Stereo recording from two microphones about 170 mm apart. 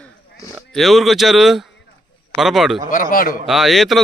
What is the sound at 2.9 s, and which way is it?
Speech, 55° left (ahead or behind).